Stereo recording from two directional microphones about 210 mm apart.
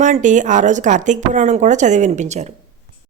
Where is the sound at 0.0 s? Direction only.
35° right (ahead or behind).